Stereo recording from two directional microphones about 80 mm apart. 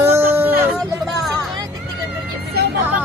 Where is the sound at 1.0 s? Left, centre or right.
Centre.